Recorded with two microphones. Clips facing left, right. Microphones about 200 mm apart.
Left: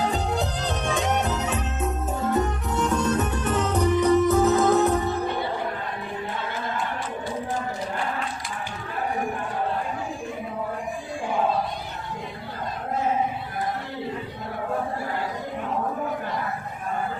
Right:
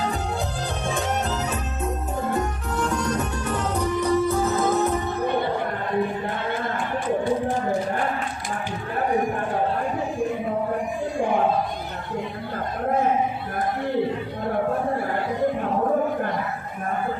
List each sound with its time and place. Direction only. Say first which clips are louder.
0.9 s music: left 1 dB; 20° left (ahead or behind)
2.7 s music: left 1 dB; 20° left (ahead or behind)